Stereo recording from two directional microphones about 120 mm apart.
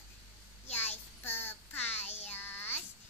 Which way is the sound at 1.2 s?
15° left (ahead or behind).